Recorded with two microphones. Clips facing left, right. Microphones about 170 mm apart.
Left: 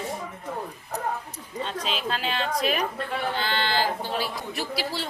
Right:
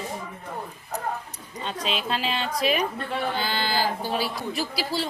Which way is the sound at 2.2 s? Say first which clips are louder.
Even; centre (ahead or behind).